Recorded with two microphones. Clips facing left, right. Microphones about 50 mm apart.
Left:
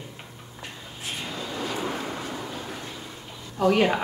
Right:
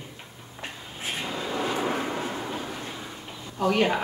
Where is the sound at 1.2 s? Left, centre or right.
Centre.